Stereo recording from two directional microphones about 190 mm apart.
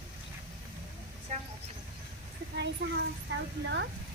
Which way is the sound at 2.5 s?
65° right (ahead or behind).